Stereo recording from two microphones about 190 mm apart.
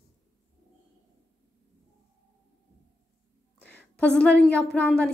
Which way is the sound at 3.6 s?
60° left (ahead or behind).